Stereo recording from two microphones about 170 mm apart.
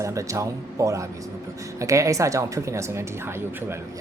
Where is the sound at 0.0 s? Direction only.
20° right (ahead or behind).